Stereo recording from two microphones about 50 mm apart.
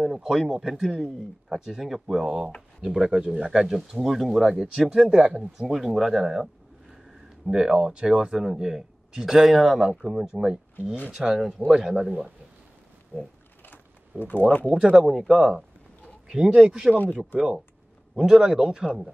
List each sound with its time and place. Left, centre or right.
0.0 s a man's voice: centre
2.2 s speech: right
2.8 s speech: centre
14.2 s speech: left
15.0 s speech: centre
16.9 s speech: left
18.1 s speech: centre